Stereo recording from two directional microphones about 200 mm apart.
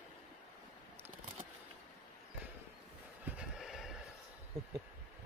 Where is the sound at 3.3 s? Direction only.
5° right (ahead or behind).